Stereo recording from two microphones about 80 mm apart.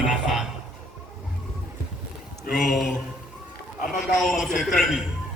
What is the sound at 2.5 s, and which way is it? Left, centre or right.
A man's voice, centre.